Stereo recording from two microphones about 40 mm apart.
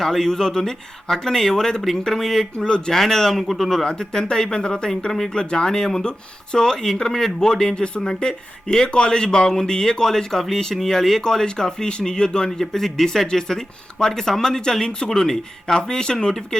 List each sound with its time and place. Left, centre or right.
0.0 s speech: centre
2.6 s speech: centre
3.4 s speech: centre
3.8 s speech: centre
6.7 s speech: centre